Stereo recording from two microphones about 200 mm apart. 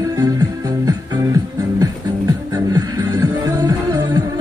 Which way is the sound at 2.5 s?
20° right (ahead or behind).